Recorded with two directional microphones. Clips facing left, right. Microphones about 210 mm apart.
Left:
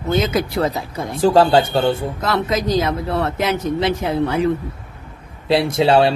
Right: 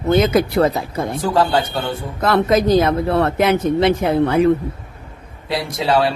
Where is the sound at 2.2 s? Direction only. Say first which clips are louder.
Right 5 dB; 55° right (ahead or behind).